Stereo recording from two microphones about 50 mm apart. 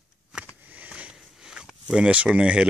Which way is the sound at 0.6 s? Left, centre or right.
Right.